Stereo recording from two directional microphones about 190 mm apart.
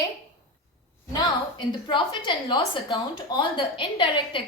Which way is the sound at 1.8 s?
25° left (ahead or behind).